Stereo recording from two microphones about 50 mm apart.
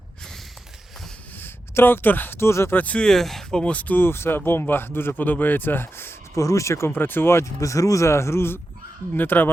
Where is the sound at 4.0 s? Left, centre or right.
Left.